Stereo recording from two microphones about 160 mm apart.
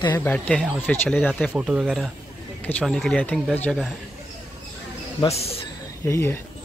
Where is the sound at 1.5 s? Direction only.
5° right (ahead or behind); by 3.8 s 10° left (ahead or behind).